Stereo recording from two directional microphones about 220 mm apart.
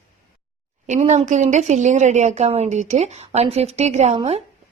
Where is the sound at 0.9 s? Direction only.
35° right (ahead or behind).